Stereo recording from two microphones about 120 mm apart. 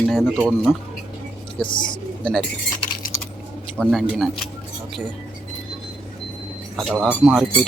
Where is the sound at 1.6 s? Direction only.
40° left (ahead or behind).